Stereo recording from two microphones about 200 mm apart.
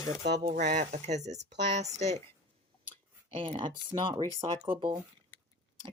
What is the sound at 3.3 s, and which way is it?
Speech, 25° right (ahead or behind).